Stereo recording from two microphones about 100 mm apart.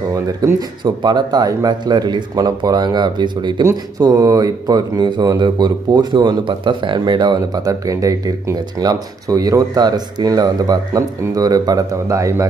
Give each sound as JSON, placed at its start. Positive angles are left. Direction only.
{"t": 0.6, "sound": "speech", "side_deg": -45}
{"t": 3.6, "sound": "speech", "side_deg": -35}
{"t": 7.3, "sound": "speech", "side_deg": -35}